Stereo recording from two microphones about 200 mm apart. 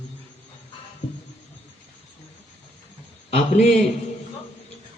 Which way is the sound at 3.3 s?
30° left (ahead or behind).